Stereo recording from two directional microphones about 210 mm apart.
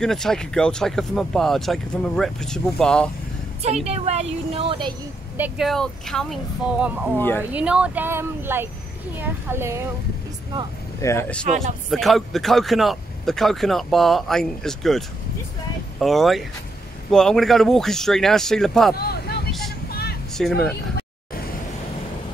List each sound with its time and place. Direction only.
0.0 s a man's voice: centre (ahead or behind)
3.6 s a woman's voice: 30° right (ahead or behind)
5.4 s a man's voice: centre (ahead or behind)
7.2 s speech: 10° left (ahead or behind)
7.5 s speech: 5° right (ahead or behind)
11.0 s a man's voice: 15° left (ahead or behind)
18.9 s vehicle: 50° left (ahead or behind)
20.3 s a man's voice: centre (ahead or behind)